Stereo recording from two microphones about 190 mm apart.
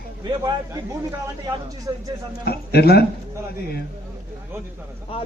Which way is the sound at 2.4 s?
55° left (ahead or behind).